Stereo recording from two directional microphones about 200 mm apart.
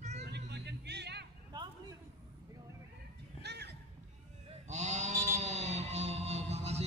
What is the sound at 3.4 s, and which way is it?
Neigh, 55° right (ahead or behind).